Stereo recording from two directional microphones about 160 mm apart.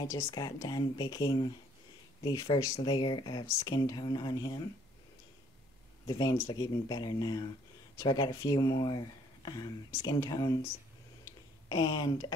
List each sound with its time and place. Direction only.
0.0 s speech: 20° left (ahead or behind)
6.0 s speech: 25° left (ahead or behind)
11.7 s speech: 25° left (ahead or behind)